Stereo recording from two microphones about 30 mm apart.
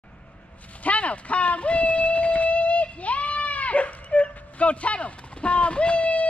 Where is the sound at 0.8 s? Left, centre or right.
Left.